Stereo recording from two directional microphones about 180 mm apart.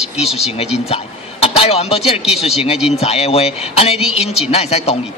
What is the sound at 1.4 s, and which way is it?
A man's voice, 35° left (ahead or behind).